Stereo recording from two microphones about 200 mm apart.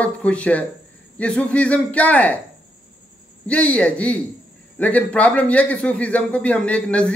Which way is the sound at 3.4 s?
5° left (ahead or behind).